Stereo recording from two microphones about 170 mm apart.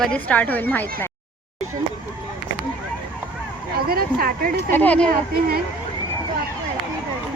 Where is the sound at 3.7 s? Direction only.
65° right (ahead or behind).